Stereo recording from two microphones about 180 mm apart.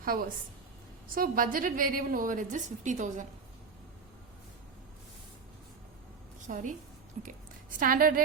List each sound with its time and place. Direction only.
0.0 s a woman's voice: 55° right (ahead or behind)
6.5 s a woman's voice: 45° right (ahead or behind)